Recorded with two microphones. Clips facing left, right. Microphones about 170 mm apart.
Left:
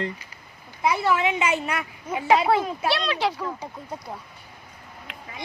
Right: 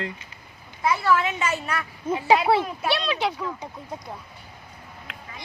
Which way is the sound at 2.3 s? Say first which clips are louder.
Even; 5° right (ahead or behind).